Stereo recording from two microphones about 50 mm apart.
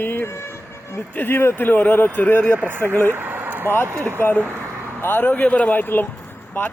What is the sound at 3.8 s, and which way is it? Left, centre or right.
Speech, right.